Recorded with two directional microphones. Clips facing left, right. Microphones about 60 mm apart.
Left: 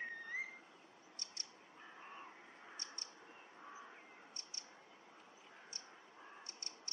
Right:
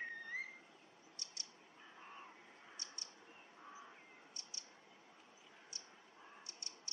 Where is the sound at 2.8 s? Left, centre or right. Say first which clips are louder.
Left 1 dB; left.